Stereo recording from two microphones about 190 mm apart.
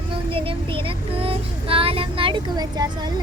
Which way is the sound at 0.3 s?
30° right (ahead or behind).